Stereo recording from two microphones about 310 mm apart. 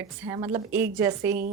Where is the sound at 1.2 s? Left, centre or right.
Right.